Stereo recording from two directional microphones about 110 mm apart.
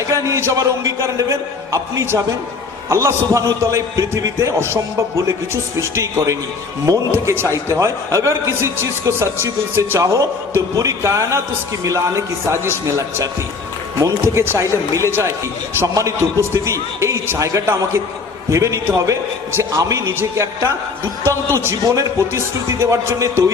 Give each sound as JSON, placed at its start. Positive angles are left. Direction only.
{"t": 0.1, "sound": "a man's voice", "side_deg": -30}